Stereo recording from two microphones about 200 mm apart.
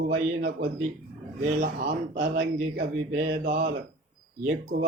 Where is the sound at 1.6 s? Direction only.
45° right (ahead or behind).